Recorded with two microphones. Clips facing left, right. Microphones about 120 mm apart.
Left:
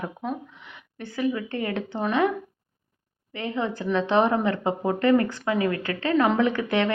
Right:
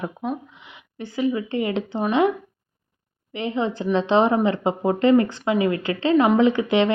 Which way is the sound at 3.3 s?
20° right (ahead or behind).